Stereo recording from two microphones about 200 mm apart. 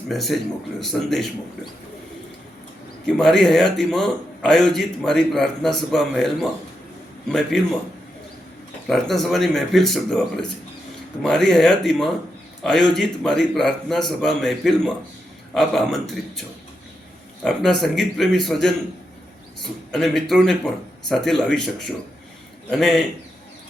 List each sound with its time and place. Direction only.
0.1 s a man's voice: centre (ahead or behind)
3.1 s a man's voice: centre (ahead or behind)
8.9 s a man's voice: centre (ahead or behind)